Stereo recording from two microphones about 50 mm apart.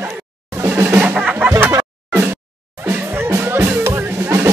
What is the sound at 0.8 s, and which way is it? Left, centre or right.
Music, right.